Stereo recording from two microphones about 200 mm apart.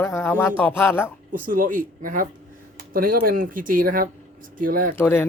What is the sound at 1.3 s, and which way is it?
Speech, 45° right (ahead or behind).